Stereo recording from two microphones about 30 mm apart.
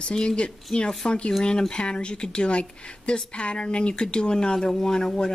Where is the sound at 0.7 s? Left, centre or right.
Centre.